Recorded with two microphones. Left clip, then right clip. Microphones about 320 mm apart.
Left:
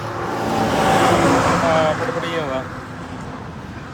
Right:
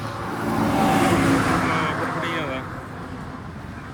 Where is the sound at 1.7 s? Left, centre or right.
Centre.